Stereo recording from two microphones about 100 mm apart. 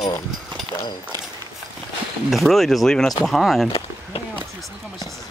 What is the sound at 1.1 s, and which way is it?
Walk, 40° right (ahead or behind).